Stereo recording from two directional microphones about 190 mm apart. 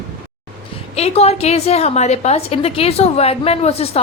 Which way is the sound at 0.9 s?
35° left (ahead or behind).